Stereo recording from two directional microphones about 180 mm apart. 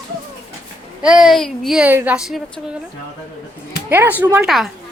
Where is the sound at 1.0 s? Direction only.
5° right (ahead or behind).